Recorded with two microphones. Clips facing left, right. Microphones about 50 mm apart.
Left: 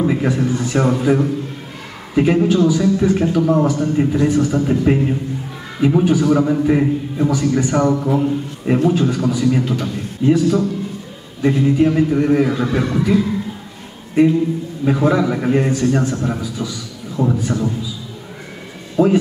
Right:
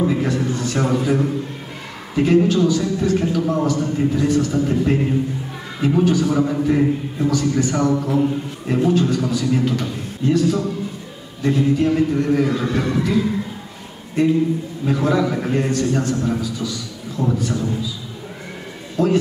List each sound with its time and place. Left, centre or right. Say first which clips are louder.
0.0 s a man's voice: left 2 dB; centre
2.1 s a man's voice: left 1 dB; centre
12.4 s a man's voice: left 2 dB; centre
19.0 s a man's voice: left 4 dB; centre